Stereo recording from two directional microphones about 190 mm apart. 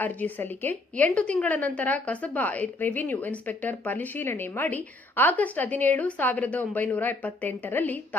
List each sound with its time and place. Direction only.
0.0 s a woman's voice: 10° left (ahead or behind)